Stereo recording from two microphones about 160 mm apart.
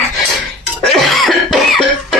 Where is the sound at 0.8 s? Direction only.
Centre (ahead or behind).